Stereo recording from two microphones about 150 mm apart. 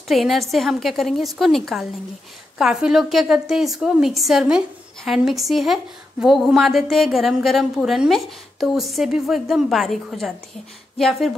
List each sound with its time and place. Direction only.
0.1 s a woman's voice: centre (ahead or behind)